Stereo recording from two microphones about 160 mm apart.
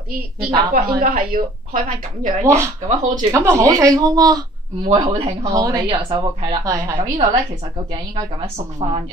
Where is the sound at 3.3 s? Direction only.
15° right (ahead or behind); by 8.6 s 35° right (ahead or behind).